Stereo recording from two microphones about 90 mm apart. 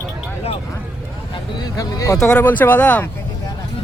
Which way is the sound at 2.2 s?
15° left (ahead or behind).